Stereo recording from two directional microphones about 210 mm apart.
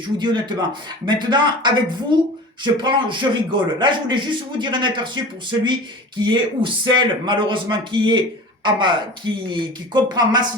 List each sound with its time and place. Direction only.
0.2 s a man's voice: 20° right (ahead or behind)